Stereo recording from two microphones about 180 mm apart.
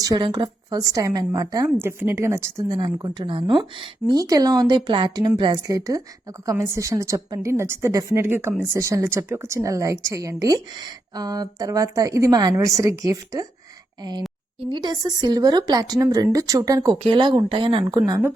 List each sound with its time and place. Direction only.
0.0 s a woman's voice: 20° right (ahead or behind)